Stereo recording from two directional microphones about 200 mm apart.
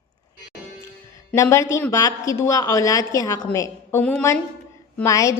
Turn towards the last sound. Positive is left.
turn(degrees=15)  # may be behind; listen again after turning